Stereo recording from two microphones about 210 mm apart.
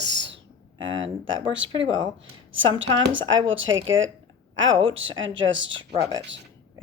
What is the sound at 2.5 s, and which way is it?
Speech, 65° right (ahead or behind).